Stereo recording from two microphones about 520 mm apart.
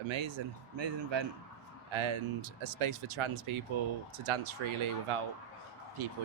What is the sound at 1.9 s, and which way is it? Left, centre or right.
Speech, right.